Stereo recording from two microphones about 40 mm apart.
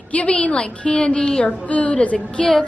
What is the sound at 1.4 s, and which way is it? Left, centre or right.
Speech, left.